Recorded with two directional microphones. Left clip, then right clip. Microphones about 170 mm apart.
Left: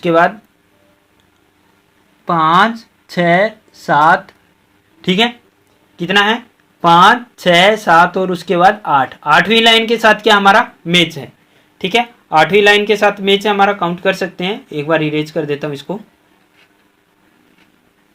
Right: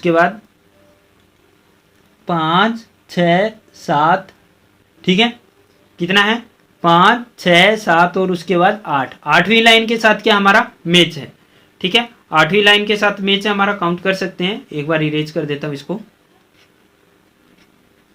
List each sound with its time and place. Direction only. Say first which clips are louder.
0.0 s speech: left 2 dB; 25° left (ahead or behind)
2.2 s speech: left 4 dB; 5° left (ahead or behind); by 16.0 s 25° left (ahead or behind)